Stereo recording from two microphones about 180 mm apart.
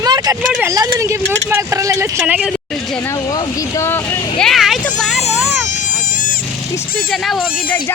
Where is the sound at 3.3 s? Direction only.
15° left (ahead or behind).